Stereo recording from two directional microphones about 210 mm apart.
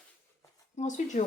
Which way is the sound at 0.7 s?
35° left (ahead or behind).